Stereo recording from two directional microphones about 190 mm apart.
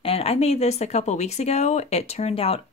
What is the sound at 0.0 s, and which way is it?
Speech, 30° left (ahead or behind).